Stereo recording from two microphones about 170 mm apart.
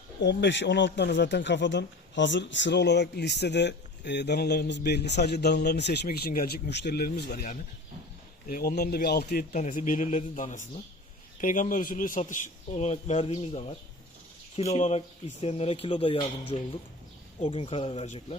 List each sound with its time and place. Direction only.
0.2 s a man's voice: 90° left; by 13.7 s 35° left (ahead or behind)
14.8 s speech: 40° left (ahead or behind)